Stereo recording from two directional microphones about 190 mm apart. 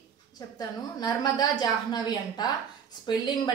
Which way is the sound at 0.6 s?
20° left (ahead or behind).